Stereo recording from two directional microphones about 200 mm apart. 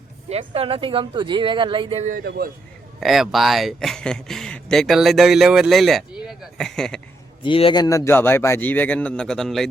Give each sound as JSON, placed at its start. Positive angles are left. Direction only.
{"t": 0.3, "sound": "speech", "side_deg": -30}
{"t": 3.0, "sound": "speech", "side_deg": 0}
{"t": 7.4, "sound": "a man's voice", "side_deg": 25}